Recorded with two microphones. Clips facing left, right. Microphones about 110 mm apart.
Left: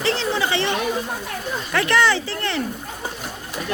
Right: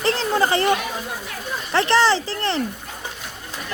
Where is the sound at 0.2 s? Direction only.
40° right (ahead or behind).